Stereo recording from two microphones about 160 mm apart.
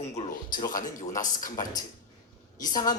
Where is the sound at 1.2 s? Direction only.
55° left (ahead or behind).